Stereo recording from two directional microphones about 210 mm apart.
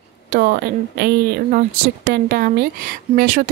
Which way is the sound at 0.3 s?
45° right (ahead or behind).